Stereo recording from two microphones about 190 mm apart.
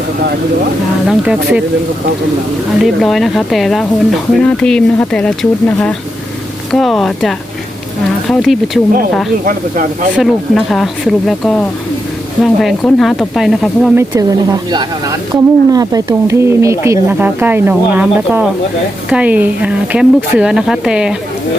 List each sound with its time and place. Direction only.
1.0 s speech: 5° right (ahead or behind)
2.8 s speech: centre (ahead or behind)
9.5 s speech: 45° right (ahead or behind)
10.2 s speech: centre (ahead or behind)
13.9 s speech: 15° right (ahead or behind)